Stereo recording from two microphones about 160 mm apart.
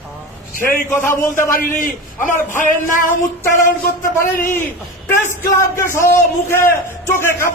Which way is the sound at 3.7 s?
65° left (ahead or behind).